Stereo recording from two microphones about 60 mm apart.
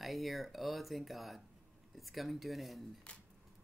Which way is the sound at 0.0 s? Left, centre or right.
Centre.